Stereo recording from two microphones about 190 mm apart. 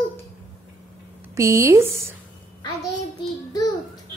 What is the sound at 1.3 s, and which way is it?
Speech, 15° right (ahead or behind).